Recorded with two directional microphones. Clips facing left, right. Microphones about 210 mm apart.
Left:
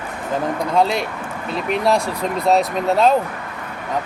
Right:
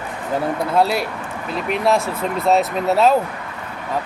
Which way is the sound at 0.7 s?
5° right (ahead or behind).